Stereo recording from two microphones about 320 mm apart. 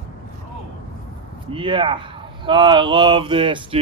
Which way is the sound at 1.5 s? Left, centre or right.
Centre.